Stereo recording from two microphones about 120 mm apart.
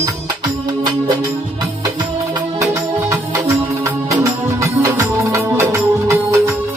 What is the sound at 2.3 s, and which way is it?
Music, 25° right (ahead or behind).